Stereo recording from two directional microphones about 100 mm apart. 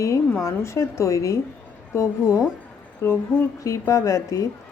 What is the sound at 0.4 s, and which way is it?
A woman's voice, 30° left (ahead or behind).